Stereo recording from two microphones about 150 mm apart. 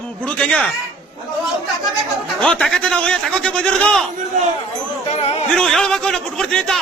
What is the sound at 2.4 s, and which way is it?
A man's voice, 5° left (ahead or behind).